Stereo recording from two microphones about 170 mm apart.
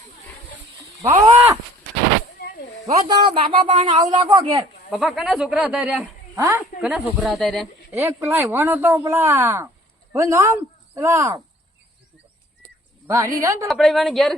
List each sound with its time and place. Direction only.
1.0 s speech: 35° right (ahead or behind)
2.4 s a sound: 65° left (ahead or behind)
2.8 s speech: 25° right (ahead or behind)
4.9 s speech: centre (ahead or behind); by 6.7 s 15° right (ahead or behind)
6.7 s speech: 5° right (ahead or behind)
7.9 s speech: 15° right (ahead or behind)
13.1 s speech: 15° right (ahead or behind)
13.7 s speech: centre (ahead or behind)